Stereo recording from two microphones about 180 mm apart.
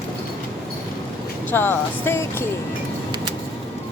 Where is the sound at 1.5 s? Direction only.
10° left (ahead or behind).